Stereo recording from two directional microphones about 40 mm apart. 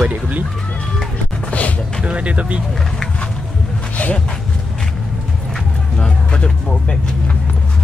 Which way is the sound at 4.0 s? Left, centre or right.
Left.